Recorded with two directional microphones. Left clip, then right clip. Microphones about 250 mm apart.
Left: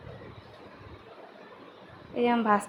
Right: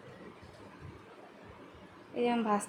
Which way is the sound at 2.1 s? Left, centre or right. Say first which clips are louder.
Left 6 dB; centre.